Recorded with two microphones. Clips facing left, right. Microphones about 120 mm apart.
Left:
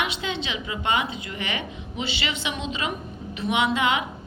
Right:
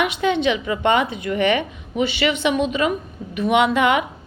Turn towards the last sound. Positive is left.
turn(degrees=-55)  # may be behind; listen again after turning